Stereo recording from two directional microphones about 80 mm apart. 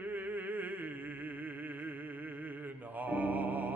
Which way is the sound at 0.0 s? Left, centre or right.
Right.